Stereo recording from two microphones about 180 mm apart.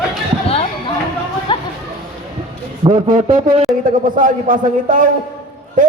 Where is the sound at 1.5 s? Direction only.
25° left (ahead or behind).